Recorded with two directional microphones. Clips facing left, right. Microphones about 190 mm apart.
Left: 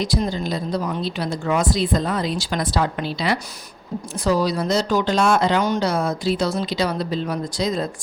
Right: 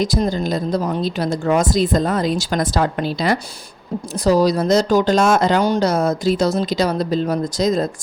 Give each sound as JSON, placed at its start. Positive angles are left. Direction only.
{"t": 0.0, "sound": "speech", "side_deg": -45}